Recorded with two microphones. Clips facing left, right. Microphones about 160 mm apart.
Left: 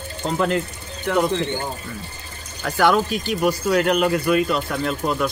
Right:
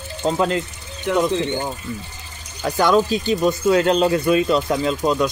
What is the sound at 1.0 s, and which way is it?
Speech, 20° right (ahead or behind).